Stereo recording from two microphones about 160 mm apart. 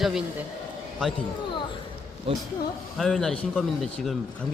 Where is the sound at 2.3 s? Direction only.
35° right (ahead or behind).